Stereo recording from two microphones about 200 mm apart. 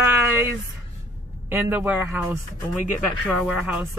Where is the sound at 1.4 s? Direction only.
10° right (ahead or behind).